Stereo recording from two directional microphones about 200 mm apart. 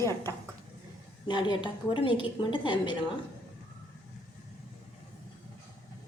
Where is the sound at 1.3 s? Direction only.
20° left (ahead or behind).